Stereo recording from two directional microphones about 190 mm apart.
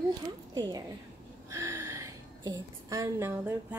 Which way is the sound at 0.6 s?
20° right (ahead or behind).